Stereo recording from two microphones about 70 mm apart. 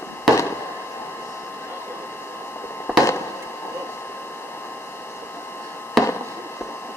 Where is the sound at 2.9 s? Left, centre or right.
Centre.